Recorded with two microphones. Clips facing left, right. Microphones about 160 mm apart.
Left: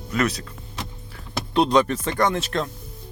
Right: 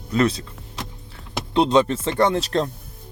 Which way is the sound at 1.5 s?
20° right (ahead or behind).